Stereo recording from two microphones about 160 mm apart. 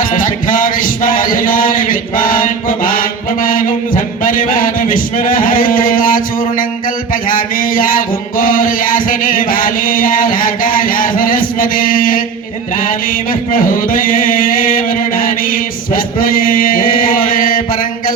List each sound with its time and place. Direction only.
0.0 s music: 55° left (ahead or behind)
7.1 s mantra: 60° left (ahead or behind)
12.7 s music: 60° left (ahead or behind)